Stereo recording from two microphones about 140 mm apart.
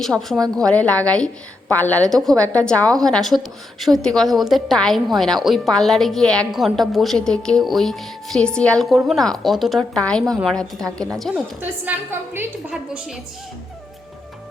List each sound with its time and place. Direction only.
0.0 s a woman's voice: centre (ahead or behind)
11.6 s a woman's voice: 15° right (ahead or behind)